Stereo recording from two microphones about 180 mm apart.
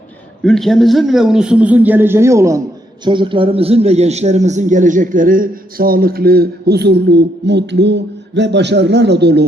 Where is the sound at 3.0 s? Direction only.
25° right (ahead or behind).